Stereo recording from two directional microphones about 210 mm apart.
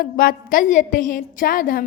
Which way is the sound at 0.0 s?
45° left (ahead or behind).